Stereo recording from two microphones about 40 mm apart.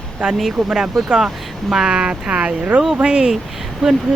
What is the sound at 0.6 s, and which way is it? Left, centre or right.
Speech, centre.